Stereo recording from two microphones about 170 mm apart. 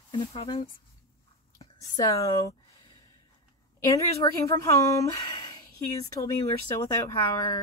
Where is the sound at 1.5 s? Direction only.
20° left (ahead or behind).